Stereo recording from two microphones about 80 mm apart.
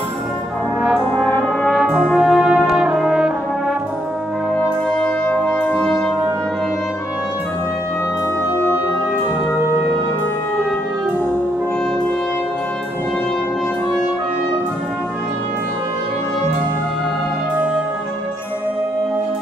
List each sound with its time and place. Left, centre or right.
1.7 s brass instrument: centre
4.9 s brass instrument: centre